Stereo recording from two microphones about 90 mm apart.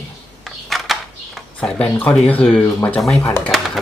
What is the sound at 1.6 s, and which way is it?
Speech, 15° left (ahead or behind).